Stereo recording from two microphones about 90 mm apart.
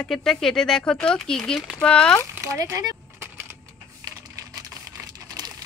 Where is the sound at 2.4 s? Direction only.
40° right (ahead or behind).